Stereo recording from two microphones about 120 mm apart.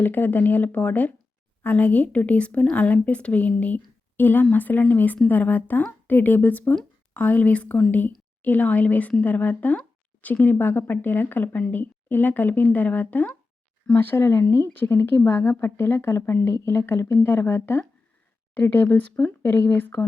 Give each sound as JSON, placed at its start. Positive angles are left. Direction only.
{"t": 0.0, "sound": "speech", "side_deg": 15}